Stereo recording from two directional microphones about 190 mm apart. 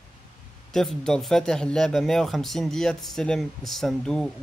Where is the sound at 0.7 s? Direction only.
5° left (ahead or behind).